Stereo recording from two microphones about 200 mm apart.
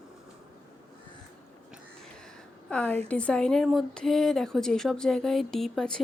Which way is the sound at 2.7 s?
5° left (ahead or behind).